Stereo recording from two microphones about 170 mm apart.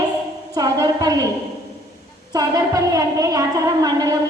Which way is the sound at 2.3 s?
20° right (ahead or behind).